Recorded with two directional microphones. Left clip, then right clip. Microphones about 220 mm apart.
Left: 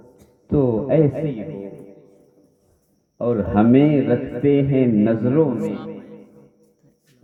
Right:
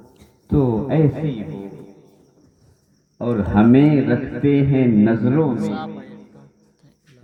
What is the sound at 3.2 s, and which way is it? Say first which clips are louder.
A man's voice: even; 35° left (ahead or behind).